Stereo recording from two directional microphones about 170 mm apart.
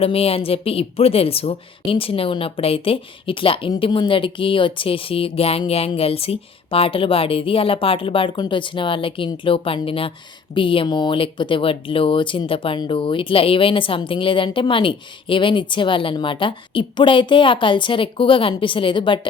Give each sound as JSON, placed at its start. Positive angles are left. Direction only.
{"t": 0.0, "sound": "a woman's voice", "side_deg": 35}